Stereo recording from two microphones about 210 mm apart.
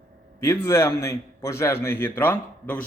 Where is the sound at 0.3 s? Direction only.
10° left (ahead or behind).